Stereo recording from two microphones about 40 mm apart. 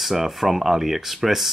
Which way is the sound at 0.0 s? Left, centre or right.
Centre.